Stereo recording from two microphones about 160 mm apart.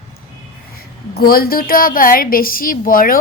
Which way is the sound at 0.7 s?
70° left (ahead or behind).